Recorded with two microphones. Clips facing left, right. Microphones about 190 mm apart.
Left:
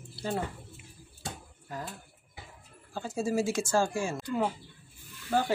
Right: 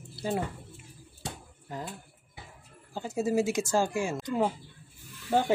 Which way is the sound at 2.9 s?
20° right (ahead or behind).